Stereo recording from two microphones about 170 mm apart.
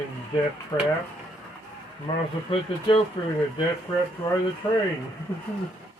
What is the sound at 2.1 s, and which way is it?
Speech, 25° left (ahead or behind).